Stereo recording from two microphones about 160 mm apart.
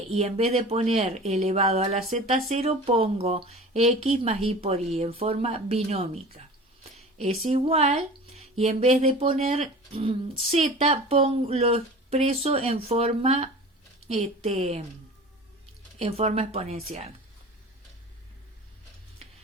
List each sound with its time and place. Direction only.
0.1 s speech: 40° right (ahead or behind)
16.0 s speech: 40° right (ahead or behind)